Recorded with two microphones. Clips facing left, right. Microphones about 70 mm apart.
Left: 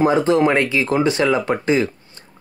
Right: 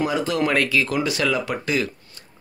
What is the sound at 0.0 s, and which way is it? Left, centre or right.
A man's voice, left.